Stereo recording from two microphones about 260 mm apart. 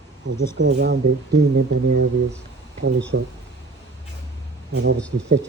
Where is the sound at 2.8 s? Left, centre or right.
Right.